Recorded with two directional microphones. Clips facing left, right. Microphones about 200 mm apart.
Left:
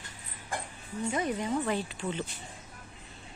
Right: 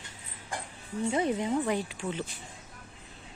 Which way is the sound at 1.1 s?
25° right (ahead or behind).